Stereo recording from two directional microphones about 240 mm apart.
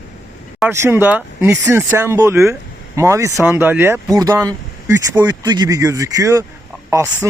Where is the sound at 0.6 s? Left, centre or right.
Centre.